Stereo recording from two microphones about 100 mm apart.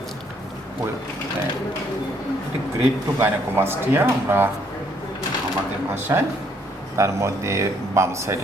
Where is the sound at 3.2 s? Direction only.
20° right (ahead or behind).